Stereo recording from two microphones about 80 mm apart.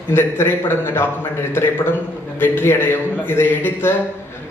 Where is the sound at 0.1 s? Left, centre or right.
Left.